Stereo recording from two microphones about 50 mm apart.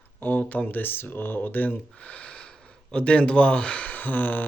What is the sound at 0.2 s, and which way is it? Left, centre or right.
Speech, left.